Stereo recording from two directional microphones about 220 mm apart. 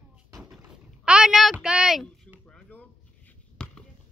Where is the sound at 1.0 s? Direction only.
5° right (ahead or behind).